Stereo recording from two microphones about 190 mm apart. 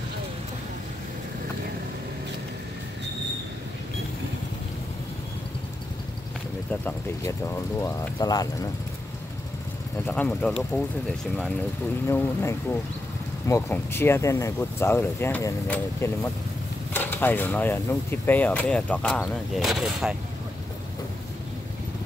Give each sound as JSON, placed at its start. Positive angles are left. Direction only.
{"t": 6.7, "sound": "speech", "side_deg": 10}
{"t": 10.0, "sound": "speech", "side_deg": 10}